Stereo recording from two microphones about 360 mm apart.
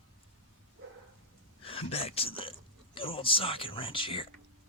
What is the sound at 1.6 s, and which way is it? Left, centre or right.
Speech, centre.